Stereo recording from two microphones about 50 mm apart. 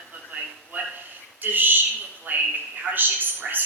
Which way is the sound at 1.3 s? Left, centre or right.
Right.